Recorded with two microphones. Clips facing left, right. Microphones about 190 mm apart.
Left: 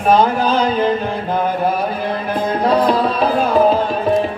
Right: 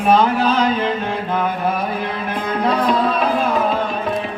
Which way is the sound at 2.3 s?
35° left (ahead or behind).